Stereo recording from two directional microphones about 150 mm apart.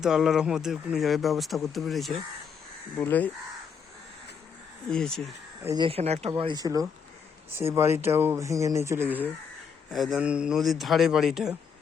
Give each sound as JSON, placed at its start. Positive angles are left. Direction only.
{"t": 0.0, "sound": "speech", "side_deg": -5}
{"t": 3.0, "sound": "speech", "side_deg": 10}
{"t": 4.9, "sound": "speech", "side_deg": 5}
{"t": 5.6, "sound": "speech", "side_deg": -30}
{"t": 5.9, "sound": "speech", "side_deg": -45}
{"t": 9.9, "sound": "speech", "side_deg": 0}